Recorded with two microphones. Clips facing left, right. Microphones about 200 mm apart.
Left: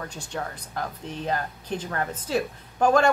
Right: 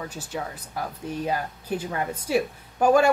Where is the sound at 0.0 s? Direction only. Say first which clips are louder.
Right 1 dB; 5° right (ahead or behind).